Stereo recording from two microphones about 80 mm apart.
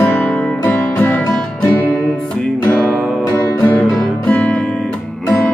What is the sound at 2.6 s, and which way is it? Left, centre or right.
Music, centre.